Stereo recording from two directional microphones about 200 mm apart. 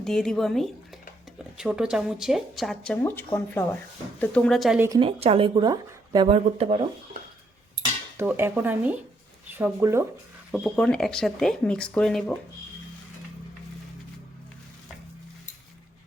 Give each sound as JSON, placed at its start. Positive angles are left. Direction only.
{"t": 0.0, "sound": "speech", "side_deg": 0}
{"t": 4.9, "sound": "speech", "side_deg": -30}
{"t": 8.2, "sound": "speech", "side_deg": -10}
{"t": 10.5, "sound": "speech", "side_deg": 0}